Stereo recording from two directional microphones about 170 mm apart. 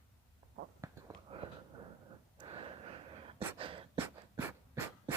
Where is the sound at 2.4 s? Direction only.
30° right (ahead or behind).